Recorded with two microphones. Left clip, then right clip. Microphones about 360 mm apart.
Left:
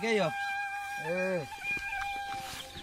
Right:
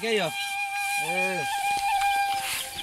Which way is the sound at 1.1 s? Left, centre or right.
Centre.